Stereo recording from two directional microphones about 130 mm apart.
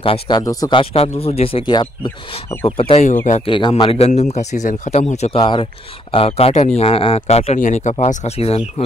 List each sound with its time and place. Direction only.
0.0 s speech: 45° left (ahead or behind)
0.4 s speech: 30° left (ahead or behind)
0.7 s a man's voice: 50° left (ahead or behind)
4.1 s speech: 60° left (ahead or behind)
5.4 s a man's voice: 40° left (ahead or behind)
6.1 s speech: 50° left (ahead or behind)
7.5 s speech: 75° left (ahead or behind)
7.9 s speech: 60° left (ahead or behind)